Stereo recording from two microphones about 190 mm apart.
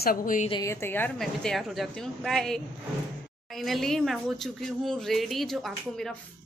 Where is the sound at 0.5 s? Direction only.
15° left (ahead or behind).